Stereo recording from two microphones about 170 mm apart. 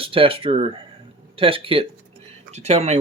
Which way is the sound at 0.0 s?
30° right (ahead or behind).